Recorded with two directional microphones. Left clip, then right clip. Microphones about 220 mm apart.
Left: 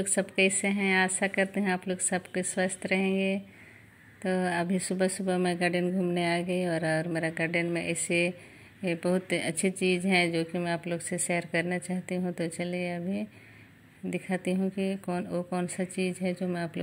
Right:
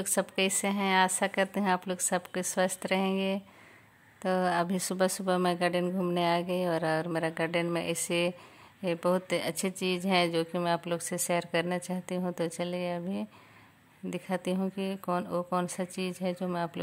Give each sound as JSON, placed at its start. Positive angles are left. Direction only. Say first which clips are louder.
{"t": 0.0, "sound": "speech", "louder": "left 3 dB", "side_deg": -25}